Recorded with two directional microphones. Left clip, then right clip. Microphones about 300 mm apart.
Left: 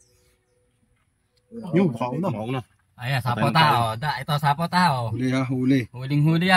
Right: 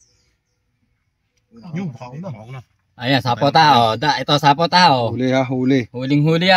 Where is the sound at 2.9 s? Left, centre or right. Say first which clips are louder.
Right 9 dB; right.